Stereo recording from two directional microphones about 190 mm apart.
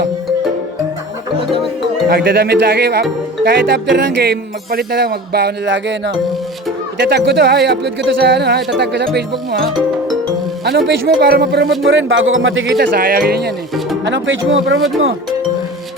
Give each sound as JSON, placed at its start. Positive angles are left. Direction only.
{"t": 2.0, "sound": "speech", "side_deg": -55}
{"t": 10.7, "sound": "speech", "side_deg": -60}
{"t": 11.9, "sound": "speech", "side_deg": -85}
{"t": 14.0, "sound": "speech", "side_deg": -80}